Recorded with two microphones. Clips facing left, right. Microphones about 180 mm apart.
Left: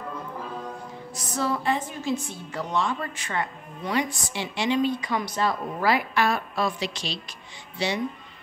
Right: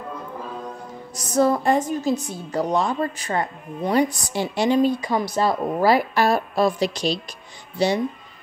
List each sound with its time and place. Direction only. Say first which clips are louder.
1.1 s a woman's voice: right 9 dB; 45° right (ahead or behind)